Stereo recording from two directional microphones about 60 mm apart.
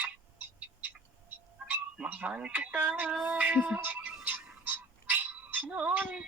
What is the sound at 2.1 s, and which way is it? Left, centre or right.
Speech, right.